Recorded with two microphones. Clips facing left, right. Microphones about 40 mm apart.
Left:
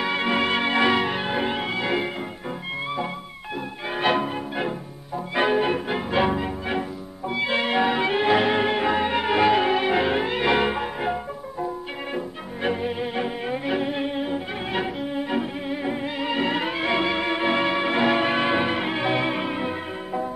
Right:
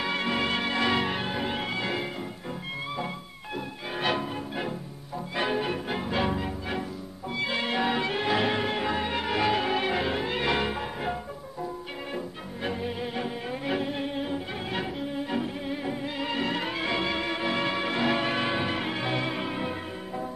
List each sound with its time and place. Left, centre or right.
0.2 s music: left
0.9 s music: centre
1.2 s music: left
1.5 s music: centre
3.9 s music: left
12.6 s music: left
13.7 s cello: centre
16.2 s music: centre